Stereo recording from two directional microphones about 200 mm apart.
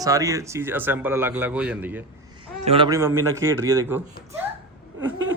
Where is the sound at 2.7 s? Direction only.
25° right (ahead or behind).